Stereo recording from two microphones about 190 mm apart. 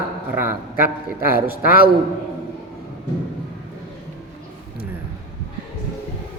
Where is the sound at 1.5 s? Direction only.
50° left (ahead or behind).